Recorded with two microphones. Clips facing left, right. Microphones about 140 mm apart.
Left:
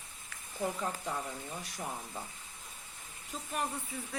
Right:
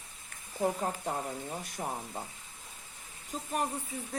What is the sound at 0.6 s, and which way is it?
Speech, 45° right (ahead or behind).